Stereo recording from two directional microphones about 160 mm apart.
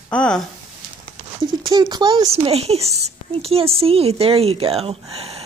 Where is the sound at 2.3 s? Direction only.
40° right (ahead or behind).